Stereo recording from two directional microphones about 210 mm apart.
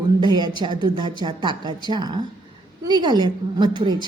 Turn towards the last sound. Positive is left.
turn(degrees=-20)  # may be behind; listen again after turning